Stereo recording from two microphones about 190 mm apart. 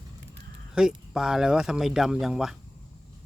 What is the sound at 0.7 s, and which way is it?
Speech, 5° right (ahead or behind).